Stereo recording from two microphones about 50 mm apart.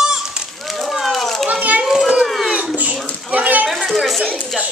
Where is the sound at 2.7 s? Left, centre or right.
Right.